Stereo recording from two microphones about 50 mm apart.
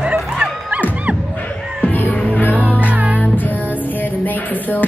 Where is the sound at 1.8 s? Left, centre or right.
Left.